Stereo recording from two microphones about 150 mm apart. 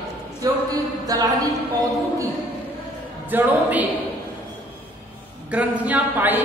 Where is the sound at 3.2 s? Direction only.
10° right (ahead or behind).